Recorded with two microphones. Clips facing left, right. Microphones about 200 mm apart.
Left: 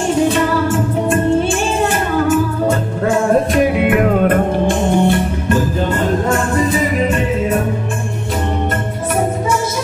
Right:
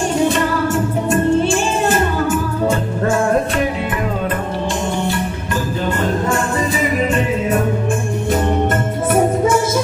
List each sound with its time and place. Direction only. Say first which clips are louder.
3.8 s music: left 8 dB; 60° left (ahead or behind)